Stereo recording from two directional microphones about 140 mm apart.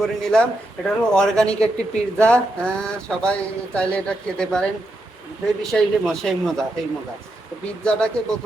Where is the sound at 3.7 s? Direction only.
5° left (ahead or behind).